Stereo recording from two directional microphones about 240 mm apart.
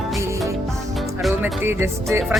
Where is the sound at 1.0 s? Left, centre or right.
Centre.